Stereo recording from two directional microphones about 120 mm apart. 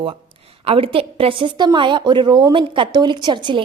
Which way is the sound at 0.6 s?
50° right (ahead or behind).